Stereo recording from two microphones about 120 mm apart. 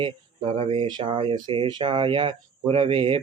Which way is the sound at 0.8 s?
40° right (ahead or behind).